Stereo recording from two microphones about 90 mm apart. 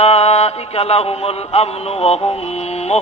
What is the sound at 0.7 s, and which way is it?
Music, 90° left.